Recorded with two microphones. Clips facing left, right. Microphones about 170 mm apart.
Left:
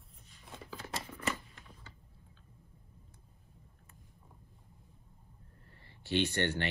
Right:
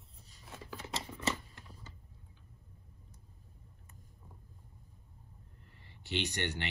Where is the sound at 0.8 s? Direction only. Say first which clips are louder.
Even; 25° right (ahead or behind).